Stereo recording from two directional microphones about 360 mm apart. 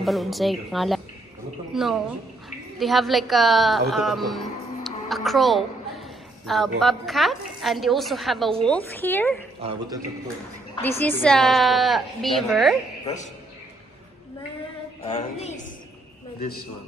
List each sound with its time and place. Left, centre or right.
0.0 s a woman's voice: centre
9.6 s a man's voice: centre
10.8 s a woman's voice: centre
13.0 s a man's voice: centre
15.0 s a woman's voice: centre